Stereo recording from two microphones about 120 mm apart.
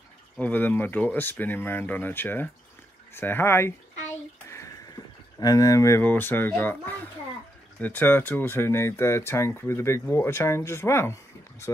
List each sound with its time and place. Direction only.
0.4 s speech: 15° left (ahead or behind)
4.5 s a sound: 25° left (ahead or behind)
5.4 s speech: 30° left (ahead or behind)